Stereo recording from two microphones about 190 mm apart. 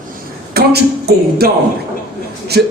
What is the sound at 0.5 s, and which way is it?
Speech, 55° right (ahead or behind).